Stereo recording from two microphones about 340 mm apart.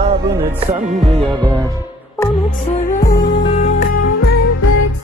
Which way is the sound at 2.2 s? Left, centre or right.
Centre.